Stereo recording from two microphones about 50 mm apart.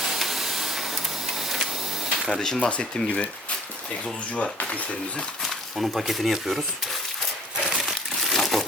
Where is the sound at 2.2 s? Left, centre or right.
Centre.